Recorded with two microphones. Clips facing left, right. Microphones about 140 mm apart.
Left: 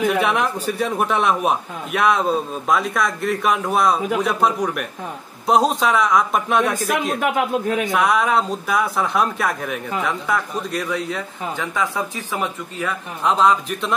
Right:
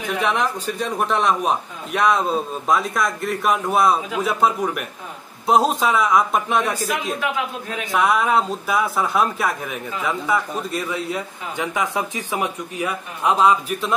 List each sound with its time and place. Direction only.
0.2 s speech: 5° left (ahead or behind)
7.2 s a man's voice: 50° left (ahead or behind)
7.8 s speech: centre (ahead or behind)
11.5 s speech: 15° right (ahead or behind)